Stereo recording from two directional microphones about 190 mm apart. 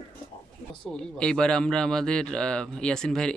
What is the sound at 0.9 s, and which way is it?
Speech, 5° left (ahead or behind).